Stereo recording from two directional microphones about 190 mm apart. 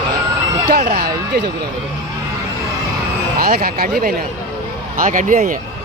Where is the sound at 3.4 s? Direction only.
50° right (ahead or behind).